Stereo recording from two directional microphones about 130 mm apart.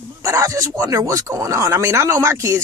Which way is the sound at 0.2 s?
25° right (ahead or behind).